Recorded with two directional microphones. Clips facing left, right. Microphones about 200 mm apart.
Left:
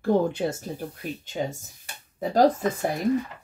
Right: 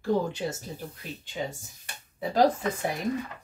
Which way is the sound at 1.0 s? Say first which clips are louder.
Left 4 dB; 45° left (ahead or behind).